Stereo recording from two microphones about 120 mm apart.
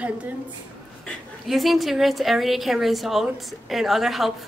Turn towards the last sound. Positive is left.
turn(degrees=0)  # may be behind; listen again after turning